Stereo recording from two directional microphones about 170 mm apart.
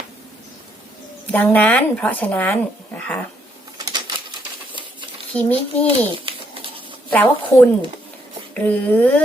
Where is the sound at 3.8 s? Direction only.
25° right (ahead or behind).